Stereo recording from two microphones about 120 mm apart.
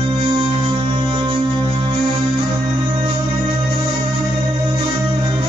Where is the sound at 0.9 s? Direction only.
40° right (ahead or behind).